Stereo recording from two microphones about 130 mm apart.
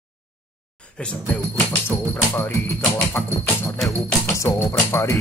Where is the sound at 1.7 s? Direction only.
15° left (ahead or behind).